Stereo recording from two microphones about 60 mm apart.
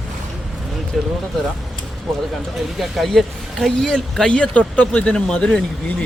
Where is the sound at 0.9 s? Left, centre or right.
Centre.